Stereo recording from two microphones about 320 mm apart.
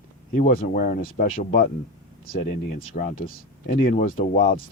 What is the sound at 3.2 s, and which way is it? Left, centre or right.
Speech, left.